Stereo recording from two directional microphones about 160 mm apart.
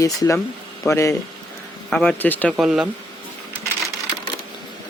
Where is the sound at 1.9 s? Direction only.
5° left (ahead or behind).